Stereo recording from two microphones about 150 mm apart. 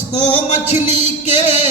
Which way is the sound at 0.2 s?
50° left (ahead or behind).